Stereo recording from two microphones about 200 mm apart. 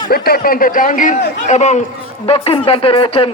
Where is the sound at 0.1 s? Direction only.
50° left (ahead or behind).